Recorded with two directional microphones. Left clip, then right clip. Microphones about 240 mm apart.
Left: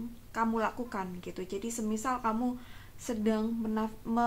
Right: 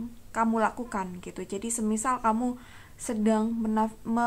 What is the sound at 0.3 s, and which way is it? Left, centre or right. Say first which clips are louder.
Speech: right 5 dB; right.